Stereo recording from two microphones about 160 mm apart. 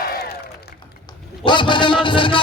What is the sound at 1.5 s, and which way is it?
Speech, 30° left (ahead or behind).